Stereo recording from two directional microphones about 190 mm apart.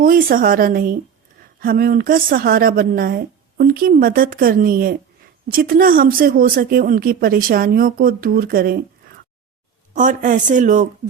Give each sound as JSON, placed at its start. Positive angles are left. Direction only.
{"t": 0.0, "sound": "speech", "side_deg": -50}